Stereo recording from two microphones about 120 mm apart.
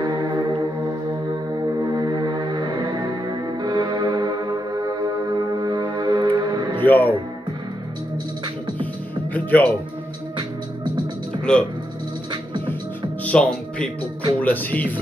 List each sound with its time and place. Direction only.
0.0 s music: 30° right (ahead or behind)
1.8 s music: 30° right (ahead or behind)
6.8 s speech: 15° left (ahead or behind)
9.3 s speech: 15° left (ahead or behind)
11.5 s speech: 5° left (ahead or behind)
13.2 s music: 10° left (ahead or behind)
14.4 s speech: 15° left (ahead or behind)